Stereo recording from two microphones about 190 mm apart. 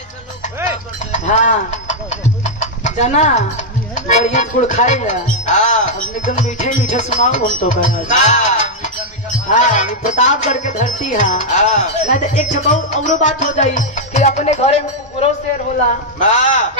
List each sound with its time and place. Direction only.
1.1 s chicken: 40° left (ahead or behind)
3.9 s music: 40° left (ahead or behind)